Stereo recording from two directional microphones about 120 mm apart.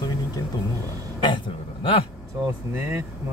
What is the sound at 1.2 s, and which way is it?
Speech, 45° left (ahead or behind).